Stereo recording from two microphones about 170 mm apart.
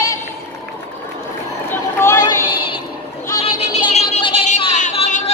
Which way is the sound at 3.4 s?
40° left (ahead or behind).